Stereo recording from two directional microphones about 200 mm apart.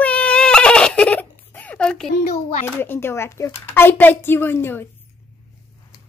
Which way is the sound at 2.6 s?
10° left (ahead or behind).